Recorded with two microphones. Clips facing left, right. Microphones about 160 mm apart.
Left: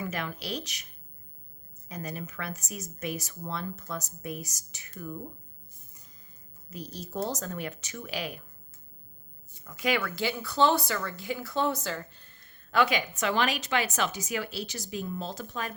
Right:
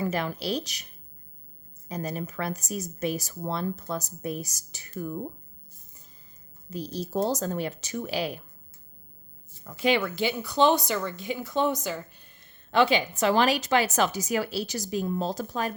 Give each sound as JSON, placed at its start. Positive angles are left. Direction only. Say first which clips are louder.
{"t": 0.0, "sound": "speech", "louder": "right 6 dB", "side_deg": -35}
{"t": 1.9, "sound": "speech", "louder": "right 5 dB", "side_deg": -35}
{"t": 6.7, "sound": "speech", "louder": "right 7 dB", "side_deg": -30}
{"t": 9.6, "sound": "speech", "louder": "right 4 dB", "side_deg": -30}
{"t": 12.7, "sound": "speech", "louder": "right 4 dB", "side_deg": -25}